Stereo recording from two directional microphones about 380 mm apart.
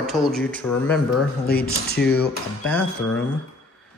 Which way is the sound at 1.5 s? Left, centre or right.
Left.